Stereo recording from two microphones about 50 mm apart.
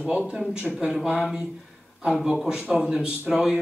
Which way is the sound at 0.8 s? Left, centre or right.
Centre.